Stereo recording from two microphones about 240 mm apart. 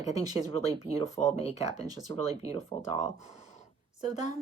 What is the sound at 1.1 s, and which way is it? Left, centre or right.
Speech, left.